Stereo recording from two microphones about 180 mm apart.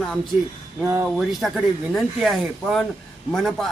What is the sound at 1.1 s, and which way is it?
Speech, centre (ahead or behind).